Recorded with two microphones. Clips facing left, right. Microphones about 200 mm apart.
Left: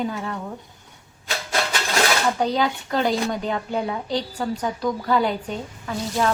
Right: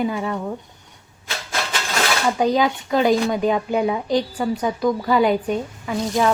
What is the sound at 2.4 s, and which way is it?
A woman's voice, 10° right (ahead or behind).